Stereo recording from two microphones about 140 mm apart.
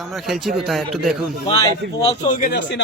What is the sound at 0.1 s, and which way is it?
Speech, centre (ahead or behind).